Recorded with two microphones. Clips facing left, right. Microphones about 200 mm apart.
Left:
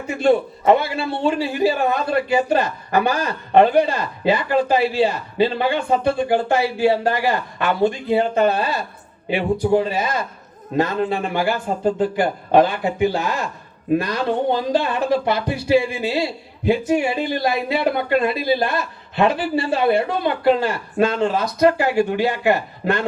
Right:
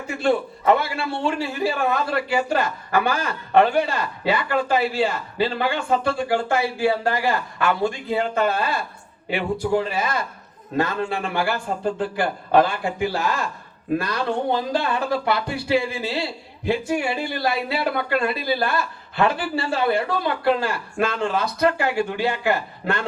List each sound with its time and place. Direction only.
0.1 s a man's voice: 20° left (ahead or behind)